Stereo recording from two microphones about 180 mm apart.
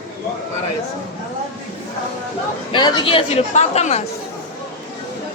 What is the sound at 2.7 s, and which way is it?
Speech, 25° left (ahead or behind).